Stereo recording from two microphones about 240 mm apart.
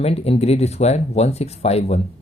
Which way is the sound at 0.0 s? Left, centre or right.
Left.